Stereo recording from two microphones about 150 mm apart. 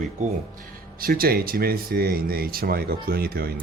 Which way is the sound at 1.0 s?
85° right.